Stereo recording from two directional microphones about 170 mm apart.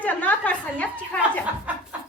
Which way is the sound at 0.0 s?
10° left (ahead or behind).